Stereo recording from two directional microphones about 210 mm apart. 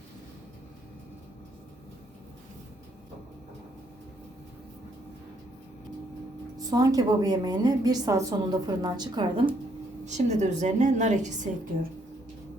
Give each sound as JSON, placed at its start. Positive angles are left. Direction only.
{"t": 6.7, "sound": "a woman's voice", "side_deg": -15}
{"t": 10.1, "sound": "a woman's voice", "side_deg": -35}